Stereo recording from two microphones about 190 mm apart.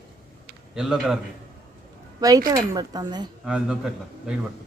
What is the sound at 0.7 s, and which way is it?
Speech, 5° right (ahead or behind).